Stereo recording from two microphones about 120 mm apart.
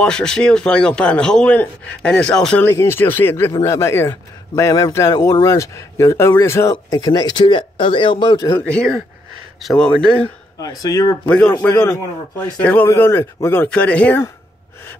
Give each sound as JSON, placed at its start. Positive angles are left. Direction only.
{"t": 0.0, "sound": "a man's voice", "side_deg": 5}
{"t": 2.6, "sound": "a man's voice", "side_deg": 20}
{"t": 8.6, "sound": "a man's voice", "side_deg": 5}
{"t": 10.8, "sound": "a man's voice", "side_deg": 30}
{"t": 11.2, "sound": "a man's voice", "side_deg": 10}
{"t": 12.6, "sound": "a man's voice", "side_deg": 15}